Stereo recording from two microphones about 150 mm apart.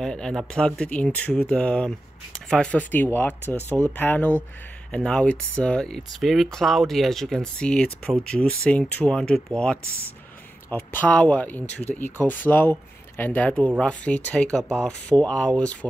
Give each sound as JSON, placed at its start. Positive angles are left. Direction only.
{"t": 0.0, "sound": "speech", "side_deg": 5}
{"t": 3.6, "sound": "speech", "side_deg": -20}
{"t": 3.9, "sound": "speech", "side_deg": 10}
{"t": 10.7, "sound": "speech", "side_deg": 10}